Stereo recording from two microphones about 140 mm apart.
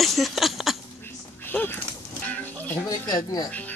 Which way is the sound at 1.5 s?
15° left (ahead or behind).